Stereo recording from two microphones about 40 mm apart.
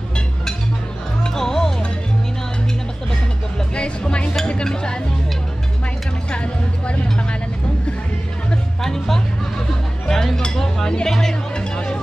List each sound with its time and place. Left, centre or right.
1.3 s music: centre
3.7 s music: left
6.3 s music: left
8.8 s music: centre
10.0 s chink: centre
10.4 s music: centre